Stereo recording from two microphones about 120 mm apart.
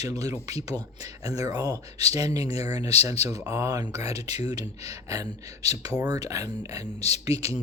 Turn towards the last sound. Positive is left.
turn(degrees=-30)  # may be behind; listen again after turning